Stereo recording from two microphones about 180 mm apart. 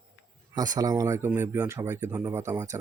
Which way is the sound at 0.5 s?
20° right (ahead or behind).